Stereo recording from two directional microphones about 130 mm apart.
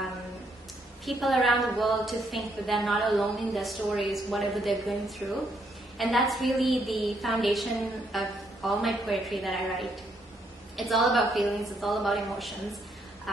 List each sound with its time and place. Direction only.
1.0 s a woman's voice: centre (ahead or behind)